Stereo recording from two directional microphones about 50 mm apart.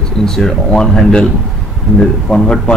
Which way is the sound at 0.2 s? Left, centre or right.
Centre.